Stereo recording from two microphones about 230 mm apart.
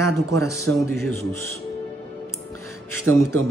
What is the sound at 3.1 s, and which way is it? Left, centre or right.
Speech, right.